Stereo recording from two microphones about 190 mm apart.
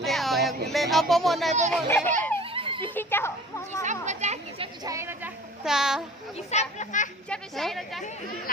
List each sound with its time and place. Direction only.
0.0 s a sound: centre (ahead or behind)
0.4 s speech: centre (ahead or behind)
1.7 s a child's voice: 10° left (ahead or behind)
2.4 s giggle: 30° right (ahead or behind)
2.8 s a woman's voice: 10° left (ahead or behind)
3.8 s a sound: 40° right (ahead or behind); by 6.0 s 5° right (ahead or behind)
6.3 s speech: 35° left (ahead or behind)
7.3 s a woman's voice: centre (ahead or behind)